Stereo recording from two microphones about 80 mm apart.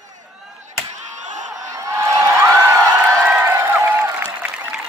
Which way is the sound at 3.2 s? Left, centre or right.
Right.